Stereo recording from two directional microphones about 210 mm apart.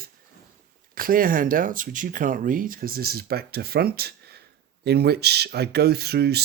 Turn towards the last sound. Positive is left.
turn(degrees=-50)  # may be behind; listen again after turning